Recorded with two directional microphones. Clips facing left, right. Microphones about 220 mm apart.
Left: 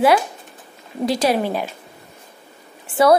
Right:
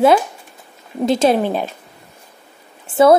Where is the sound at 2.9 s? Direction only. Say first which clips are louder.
Right 3 dB; 25° right (ahead or behind).